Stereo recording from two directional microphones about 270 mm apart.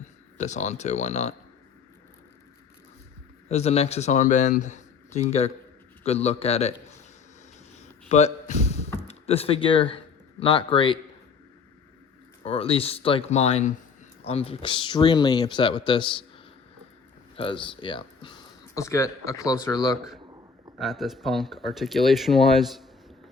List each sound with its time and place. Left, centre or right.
0.3 s speech: left
3.5 s a man's voice: left
7.8 s a sound: left
9.0 s speech: left
12.4 s speech: left
17.3 s speech: centre
20.7 s speech: centre